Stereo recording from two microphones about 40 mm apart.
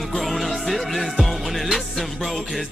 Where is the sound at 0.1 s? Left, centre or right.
Centre.